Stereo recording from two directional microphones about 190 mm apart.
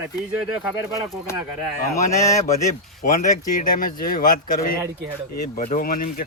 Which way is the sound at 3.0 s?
45° left (ahead or behind).